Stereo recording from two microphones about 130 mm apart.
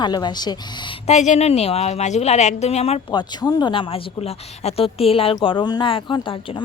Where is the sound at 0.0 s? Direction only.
35° left (ahead or behind).